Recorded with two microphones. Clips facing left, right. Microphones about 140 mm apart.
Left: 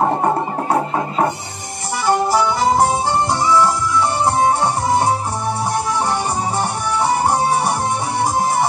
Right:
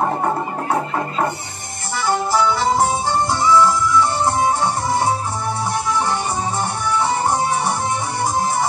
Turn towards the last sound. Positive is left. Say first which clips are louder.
# left 3 dB
turn(degrees=35)  # may be behind; listen again after turning